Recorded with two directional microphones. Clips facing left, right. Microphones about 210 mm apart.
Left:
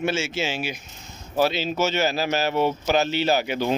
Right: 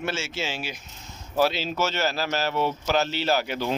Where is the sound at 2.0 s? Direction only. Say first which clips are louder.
Left 3 dB; 15° left (ahead or behind).